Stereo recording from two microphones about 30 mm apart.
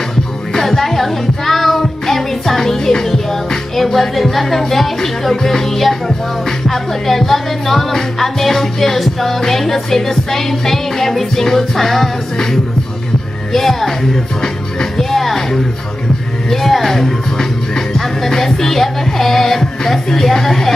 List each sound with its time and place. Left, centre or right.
0.5 s music: centre
13.5 s music: centre
14.4 s music: centre
15.0 s speech: centre
16.4 s music: centre